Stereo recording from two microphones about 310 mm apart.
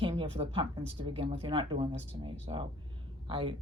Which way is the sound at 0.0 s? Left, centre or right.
Centre.